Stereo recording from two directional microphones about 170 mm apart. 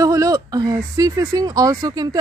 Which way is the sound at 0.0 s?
20° right (ahead or behind).